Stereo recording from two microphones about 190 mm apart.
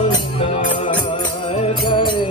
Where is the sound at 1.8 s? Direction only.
25° left (ahead or behind).